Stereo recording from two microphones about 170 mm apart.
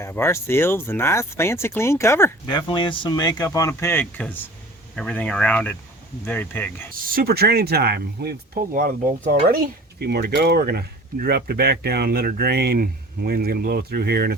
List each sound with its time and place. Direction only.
0.0 s speech: 15° left (ahead or behind)
2.5 s speech: 30° left (ahead or behind); by 6.8 s 10° left (ahead or behind)
6.9 s speech: 55° right (ahead or behind)
10.0 s speech: 70° right (ahead or behind)